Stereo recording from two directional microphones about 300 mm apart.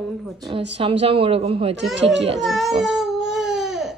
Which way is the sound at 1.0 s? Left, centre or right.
Centre.